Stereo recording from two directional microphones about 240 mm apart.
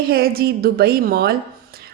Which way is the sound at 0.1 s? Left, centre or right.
Right.